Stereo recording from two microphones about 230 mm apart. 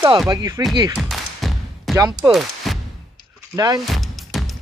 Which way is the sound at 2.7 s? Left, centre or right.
Centre.